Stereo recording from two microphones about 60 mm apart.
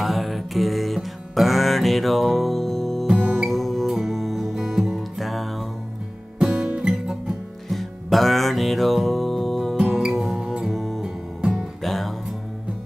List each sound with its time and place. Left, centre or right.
0.0 s music: centre
3.1 s music: centre
6.4 s music: centre
7.7 s music: centre